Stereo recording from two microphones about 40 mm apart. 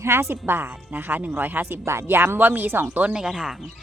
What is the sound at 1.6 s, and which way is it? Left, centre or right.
Speech, right.